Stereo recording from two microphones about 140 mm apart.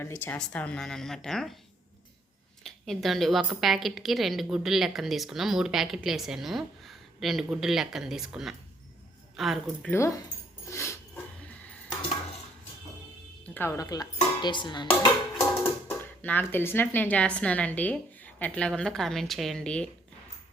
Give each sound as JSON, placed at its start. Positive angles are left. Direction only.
{"t": 0.0, "sound": "a woman's voice", "side_deg": 15}
{"t": 2.6, "sound": "a woman's voice", "side_deg": 0}
{"t": 9.8, "sound": "speech", "side_deg": 15}
{"t": 10.7, "sound": "dog", "side_deg": 20}
{"t": 13.4, "sound": "dishes", "side_deg": 15}
{"t": 15.6, "sound": "speech", "side_deg": 15}